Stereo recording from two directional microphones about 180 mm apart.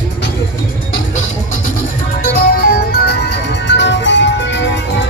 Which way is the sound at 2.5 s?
55° left (ahead or behind).